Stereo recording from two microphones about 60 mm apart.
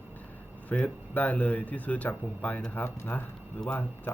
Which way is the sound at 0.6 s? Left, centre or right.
Left.